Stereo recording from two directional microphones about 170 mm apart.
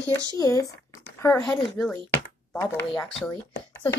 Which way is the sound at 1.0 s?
15° left (ahead or behind).